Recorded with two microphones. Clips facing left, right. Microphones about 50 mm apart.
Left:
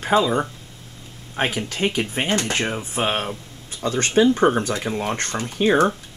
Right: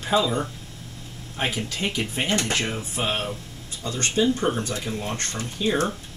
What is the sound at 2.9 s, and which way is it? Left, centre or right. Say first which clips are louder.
Speech: left 4 dB; left.